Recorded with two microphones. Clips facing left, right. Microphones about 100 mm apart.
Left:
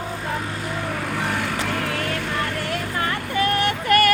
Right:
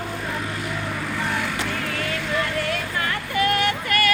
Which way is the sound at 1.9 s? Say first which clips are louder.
Left 2 dB; 45° left (ahead or behind).